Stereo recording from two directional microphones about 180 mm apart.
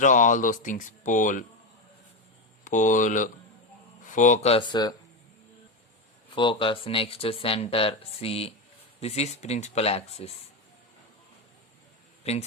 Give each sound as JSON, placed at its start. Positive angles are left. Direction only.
{"t": 0.0, "sound": "speech", "side_deg": 45}
{"t": 2.6, "sound": "speech", "side_deg": 45}
{"t": 4.7, "sound": "speech", "side_deg": 20}
{"t": 6.3, "sound": "speech", "side_deg": 30}
{"t": 12.2, "sound": "a man's voice", "side_deg": 35}